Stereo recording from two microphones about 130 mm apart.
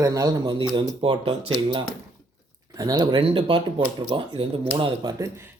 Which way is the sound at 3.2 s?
45° right (ahead or behind).